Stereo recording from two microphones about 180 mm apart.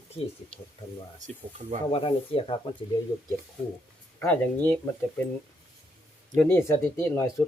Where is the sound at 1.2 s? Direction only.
40° right (ahead or behind).